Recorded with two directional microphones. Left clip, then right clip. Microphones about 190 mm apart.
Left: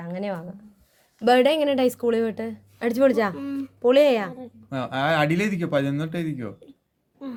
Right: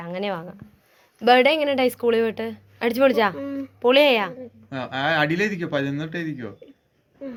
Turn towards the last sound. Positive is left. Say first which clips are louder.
# even
turn(degrees=55)  # may be behind; listen again after turning